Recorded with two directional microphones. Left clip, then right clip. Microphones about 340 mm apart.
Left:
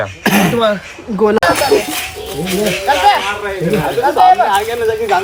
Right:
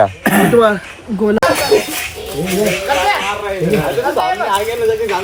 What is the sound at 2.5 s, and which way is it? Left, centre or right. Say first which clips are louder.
Speech: left 1 dB; centre.